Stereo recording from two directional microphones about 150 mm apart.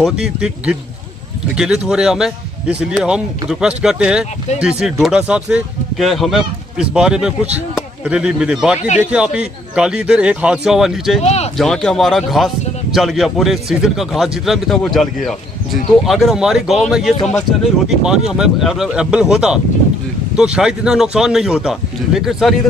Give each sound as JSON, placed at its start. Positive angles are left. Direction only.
{"t": 0.0, "sound": "speech", "side_deg": -5}
{"t": 11.2, "sound": "a sound", "side_deg": 45}
{"t": 11.5, "sound": "speech", "side_deg": 5}